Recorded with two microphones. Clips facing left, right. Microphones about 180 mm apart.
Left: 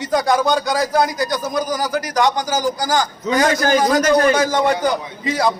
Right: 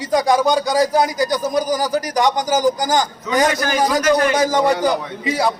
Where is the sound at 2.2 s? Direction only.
15° right (ahead or behind).